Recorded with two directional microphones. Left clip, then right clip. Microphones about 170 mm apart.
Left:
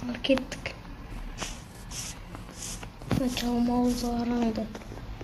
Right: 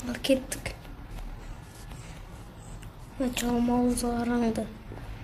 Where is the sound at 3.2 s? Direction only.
5° right (ahead or behind).